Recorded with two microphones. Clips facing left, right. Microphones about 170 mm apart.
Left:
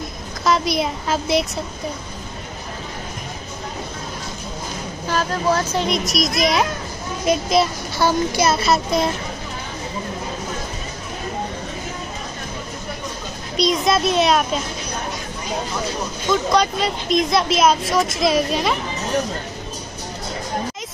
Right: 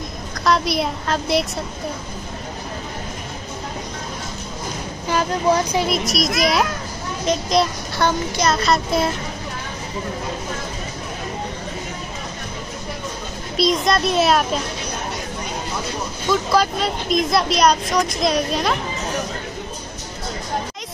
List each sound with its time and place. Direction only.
0.5 s speech: centre (ahead or behind)
5.0 s speech: 15° right (ahead or behind)
5.9 s speech: centre (ahead or behind)
13.6 s speech: centre (ahead or behind)
16.3 s speech: centre (ahead or behind)